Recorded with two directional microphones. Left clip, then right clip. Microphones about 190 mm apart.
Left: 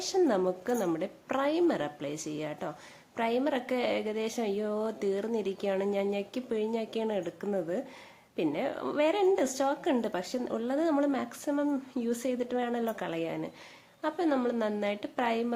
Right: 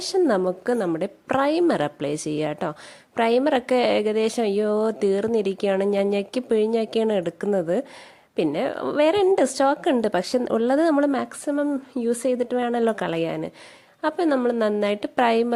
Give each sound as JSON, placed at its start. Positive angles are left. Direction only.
{"t": 0.0, "sound": "a woman's voice", "side_deg": -40}